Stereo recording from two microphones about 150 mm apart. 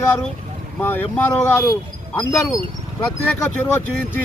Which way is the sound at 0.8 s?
15° left (ahead or behind).